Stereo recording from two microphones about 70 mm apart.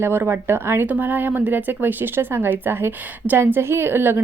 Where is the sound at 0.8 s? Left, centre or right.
Right.